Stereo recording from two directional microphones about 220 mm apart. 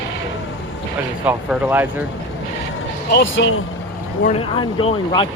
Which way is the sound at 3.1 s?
55° left (ahead or behind).